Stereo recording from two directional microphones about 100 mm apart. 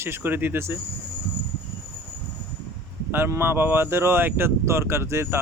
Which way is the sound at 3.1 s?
25° right (ahead or behind).